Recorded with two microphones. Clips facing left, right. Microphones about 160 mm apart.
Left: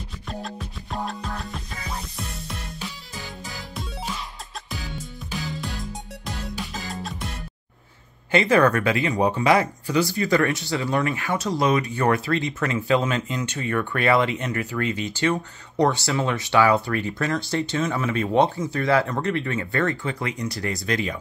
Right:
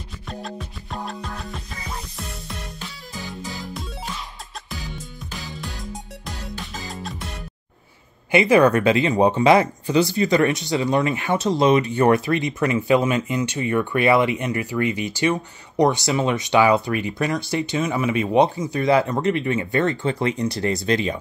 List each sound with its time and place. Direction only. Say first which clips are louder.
0.3 s music: right 1 dB; centre (ahead or behind)
6.5 s music: left 1 dB; centre (ahead or behind)
8.3 s speech: right 3 dB; 15° right (ahead or behind)